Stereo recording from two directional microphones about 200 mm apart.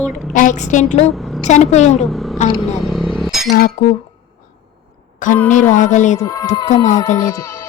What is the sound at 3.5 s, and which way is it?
Speech, 40° left (ahead or behind).